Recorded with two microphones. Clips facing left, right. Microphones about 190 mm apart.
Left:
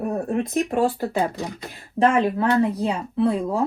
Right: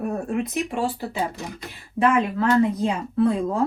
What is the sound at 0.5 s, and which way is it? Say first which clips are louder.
Speech: left 4 dB; 55° left (ahead or behind).